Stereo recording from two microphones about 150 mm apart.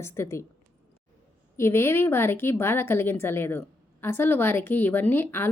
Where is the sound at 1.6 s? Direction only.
15° left (ahead or behind).